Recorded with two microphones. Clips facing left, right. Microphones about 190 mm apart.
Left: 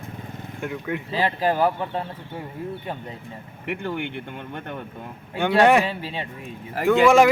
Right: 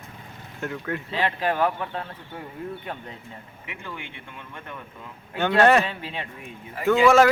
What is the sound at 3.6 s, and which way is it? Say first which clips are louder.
Speech: left 11 dB; 60° left (ahead or behind).